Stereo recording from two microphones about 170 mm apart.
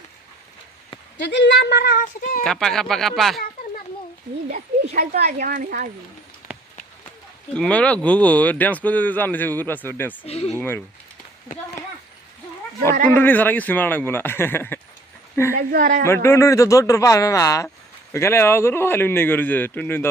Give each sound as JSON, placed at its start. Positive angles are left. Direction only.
{"t": 1.2, "sound": "speech", "side_deg": 90}
{"t": 2.4, "sound": "speech", "side_deg": 5}
{"t": 4.9, "sound": "speech", "side_deg": -70}
{"t": 5.4, "sound": "speech", "side_deg": -55}
{"t": 6.5, "sound": "run", "side_deg": -5}
{"t": 7.5, "sound": "speech", "side_deg": 5}
{"t": 10.2, "sound": "speech", "side_deg": 40}
{"t": 10.6, "sound": "speech", "side_deg": 10}
{"t": 13.1, "sound": "speech", "side_deg": 10}
{"t": 15.5, "sound": "a woman's voice", "side_deg": -55}
{"t": 16.0, "sound": "speech", "side_deg": 15}